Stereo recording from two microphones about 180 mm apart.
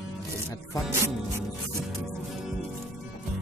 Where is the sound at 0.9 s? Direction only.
15° right (ahead or behind).